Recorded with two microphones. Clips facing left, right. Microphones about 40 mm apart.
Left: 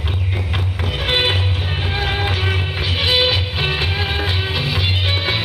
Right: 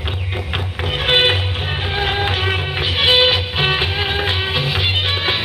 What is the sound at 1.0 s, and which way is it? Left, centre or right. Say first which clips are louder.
Music: right 3 dB; right.